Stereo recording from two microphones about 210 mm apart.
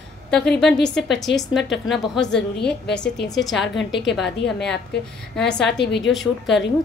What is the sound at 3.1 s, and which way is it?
Speech, 55° left (ahead or behind).